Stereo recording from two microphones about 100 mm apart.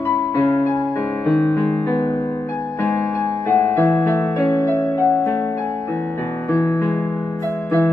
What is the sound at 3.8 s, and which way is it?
Music, 25° left (ahead or behind).